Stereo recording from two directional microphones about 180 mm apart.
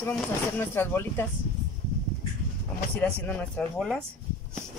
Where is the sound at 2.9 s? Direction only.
5° left (ahead or behind).